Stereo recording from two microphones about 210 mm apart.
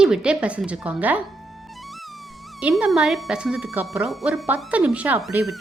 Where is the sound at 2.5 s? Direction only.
5° right (ahead or behind).